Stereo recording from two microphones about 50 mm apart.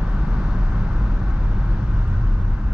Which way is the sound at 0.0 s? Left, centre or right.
Centre.